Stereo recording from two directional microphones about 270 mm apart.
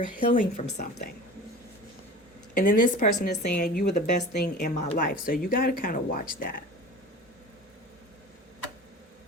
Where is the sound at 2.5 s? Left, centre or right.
Left.